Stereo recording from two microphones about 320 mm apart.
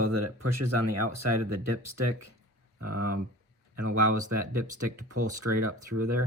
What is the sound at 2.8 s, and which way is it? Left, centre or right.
Speech, right.